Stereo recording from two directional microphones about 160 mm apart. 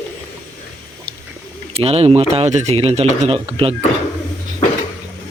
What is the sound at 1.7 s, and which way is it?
Speech, 40° right (ahead or behind).